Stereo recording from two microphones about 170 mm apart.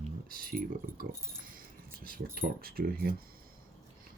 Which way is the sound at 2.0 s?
60° right (ahead or behind).